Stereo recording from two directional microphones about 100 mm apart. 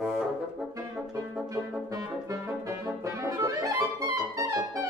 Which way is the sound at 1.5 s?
35° right (ahead or behind).